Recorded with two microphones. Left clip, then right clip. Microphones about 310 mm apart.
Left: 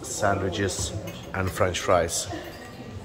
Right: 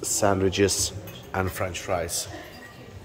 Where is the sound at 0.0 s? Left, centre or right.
Right.